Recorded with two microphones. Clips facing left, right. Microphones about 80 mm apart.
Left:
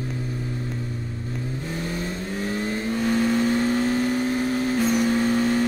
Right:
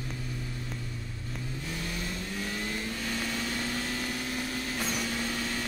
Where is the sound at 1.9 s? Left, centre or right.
Left.